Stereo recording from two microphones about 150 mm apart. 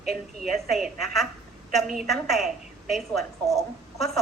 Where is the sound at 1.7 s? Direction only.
Centre (ahead or behind).